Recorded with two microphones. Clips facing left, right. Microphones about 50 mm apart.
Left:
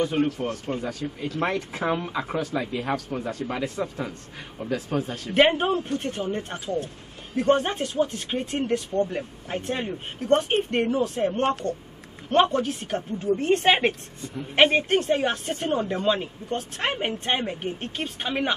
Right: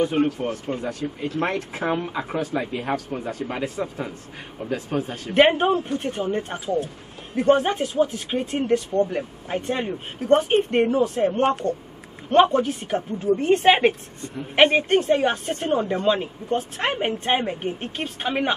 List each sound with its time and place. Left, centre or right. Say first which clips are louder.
0.0 s speech: right 3 dB; centre
1.4 s speech: even; centre
2.3 s speech: right 2 dB; right; by 18.5 s centre